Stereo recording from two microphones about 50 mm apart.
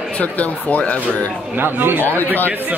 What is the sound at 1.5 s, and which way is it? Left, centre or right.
Speech, right.